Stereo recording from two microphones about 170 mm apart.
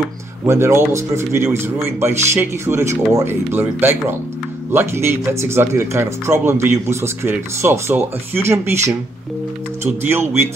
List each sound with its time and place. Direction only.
0.5 s speech: 15° right (ahead or behind)